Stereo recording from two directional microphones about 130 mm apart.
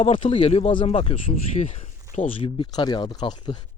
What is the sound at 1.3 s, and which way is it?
Speech, 65° left (ahead or behind).